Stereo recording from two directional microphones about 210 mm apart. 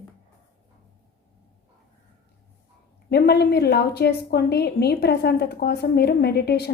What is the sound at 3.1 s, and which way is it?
A woman's voice, 50° left (ahead or behind).